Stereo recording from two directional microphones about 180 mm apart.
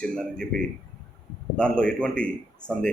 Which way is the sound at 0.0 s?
5° left (ahead or behind).